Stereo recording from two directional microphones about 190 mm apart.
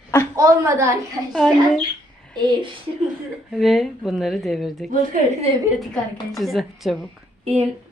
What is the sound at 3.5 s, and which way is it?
Speech, centre (ahead or behind).